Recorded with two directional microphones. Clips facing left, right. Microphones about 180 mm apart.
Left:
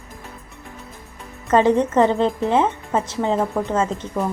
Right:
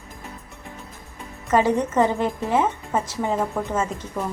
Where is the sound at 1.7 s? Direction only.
20° left (ahead or behind).